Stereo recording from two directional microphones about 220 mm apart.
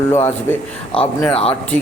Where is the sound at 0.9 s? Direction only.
25° left (ahead or behind).